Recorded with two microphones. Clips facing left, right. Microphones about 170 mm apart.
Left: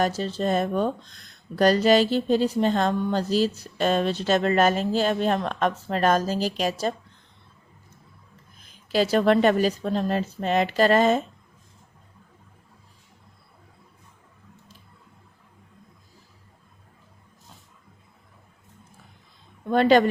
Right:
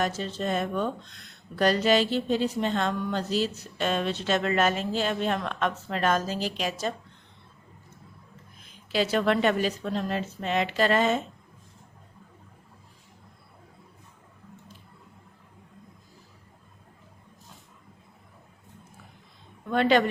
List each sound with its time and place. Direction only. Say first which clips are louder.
0.0 s speech: left 4 dB; 35° left (ahead or behind)
8.9 s speech: left 5 dB; 40° left (ahead or behind)
19.7 s speech: left 4 dB; 40° left (ahead or behind)